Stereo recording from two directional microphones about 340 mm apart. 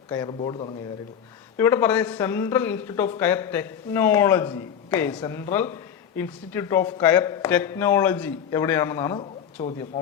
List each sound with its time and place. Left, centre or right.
0.1 s speech: centre